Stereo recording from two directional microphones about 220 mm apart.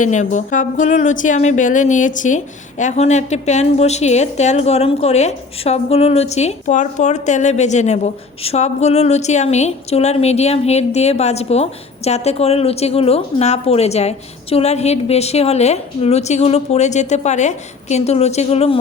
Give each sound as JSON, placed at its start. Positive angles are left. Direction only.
{"t": 0.0, "sound": "speech", "side_deg": 35}